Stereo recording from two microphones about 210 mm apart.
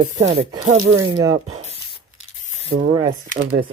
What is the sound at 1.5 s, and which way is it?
Speech, 30° right (ahead or behind).